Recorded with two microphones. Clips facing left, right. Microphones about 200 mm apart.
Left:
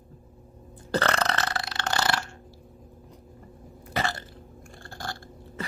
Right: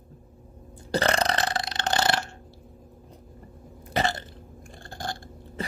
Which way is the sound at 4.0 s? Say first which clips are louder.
Right 3 dB; 20° right (ahead or behind).